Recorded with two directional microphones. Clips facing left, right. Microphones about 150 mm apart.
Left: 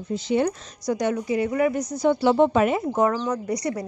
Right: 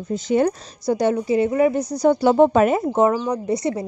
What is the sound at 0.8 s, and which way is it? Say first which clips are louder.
Speech: right 5 dB; 30° right (ahead or behind).